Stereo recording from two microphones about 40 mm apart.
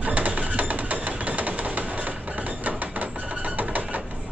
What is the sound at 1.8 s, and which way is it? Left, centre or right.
Music, right.